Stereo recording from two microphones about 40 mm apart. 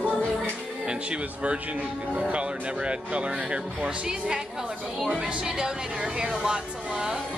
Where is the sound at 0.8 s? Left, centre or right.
Right.